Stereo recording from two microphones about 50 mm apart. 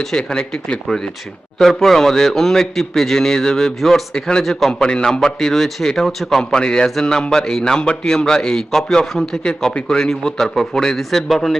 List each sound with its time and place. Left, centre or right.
0.0 s a man's voice: centre
6.4 s a man's voice: centre